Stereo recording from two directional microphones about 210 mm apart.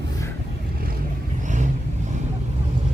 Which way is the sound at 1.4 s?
35° right (ahead or behind).